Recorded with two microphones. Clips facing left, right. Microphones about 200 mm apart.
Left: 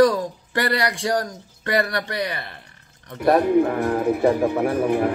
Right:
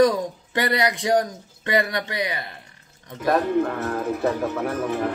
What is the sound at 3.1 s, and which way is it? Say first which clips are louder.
Music: left 4 dB; 10° left (ahead or behind).